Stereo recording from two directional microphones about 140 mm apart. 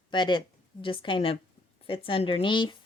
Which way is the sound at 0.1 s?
35° left (ahead or behind).